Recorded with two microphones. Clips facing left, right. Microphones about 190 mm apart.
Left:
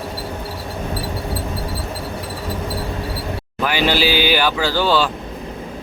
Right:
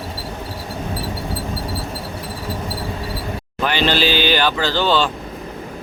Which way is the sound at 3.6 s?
10° left (ahead or behind).